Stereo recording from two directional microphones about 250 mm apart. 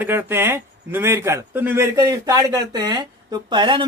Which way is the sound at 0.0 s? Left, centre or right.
Centre.